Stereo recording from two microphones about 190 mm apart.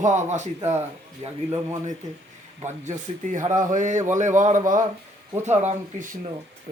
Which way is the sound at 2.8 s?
40° right (ahead or behind).